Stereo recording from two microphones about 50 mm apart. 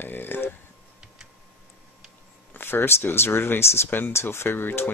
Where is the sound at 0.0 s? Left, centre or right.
Left.